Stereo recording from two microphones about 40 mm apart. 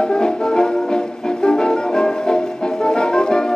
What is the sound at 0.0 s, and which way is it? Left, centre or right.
Music, centre.